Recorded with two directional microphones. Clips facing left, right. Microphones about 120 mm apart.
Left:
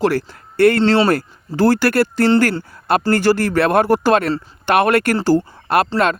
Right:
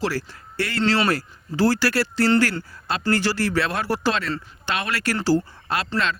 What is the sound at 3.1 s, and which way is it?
Speech, 50° left (ahead or behind).